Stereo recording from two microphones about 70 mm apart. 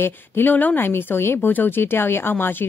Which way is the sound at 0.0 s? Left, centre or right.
Left.